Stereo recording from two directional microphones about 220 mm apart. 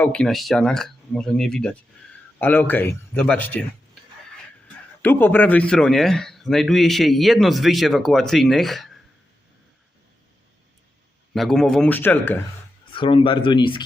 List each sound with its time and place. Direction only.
0.0 s a man's voice: 5° left (ahead or behind)
5.0 s a man's voice: 10° left (ahead or behind)
11.3 s a man's voice: centre (ahead or behind)
12.9 s speech: 20° left (ahead or behind)